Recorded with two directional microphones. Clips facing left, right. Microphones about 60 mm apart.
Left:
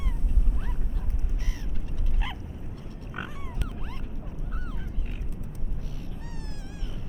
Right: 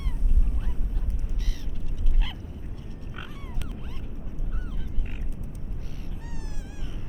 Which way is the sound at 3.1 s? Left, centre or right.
Centre.